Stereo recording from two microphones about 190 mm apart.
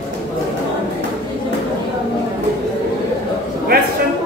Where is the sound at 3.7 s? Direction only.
55° right (ahead or behind).